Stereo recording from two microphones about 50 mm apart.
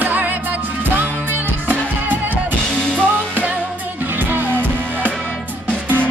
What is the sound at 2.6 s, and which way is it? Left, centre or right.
Music, centre.